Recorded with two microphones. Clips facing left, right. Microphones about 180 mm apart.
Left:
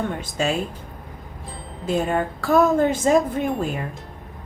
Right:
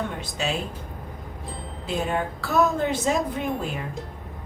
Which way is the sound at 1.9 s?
45° left (ahead or behind).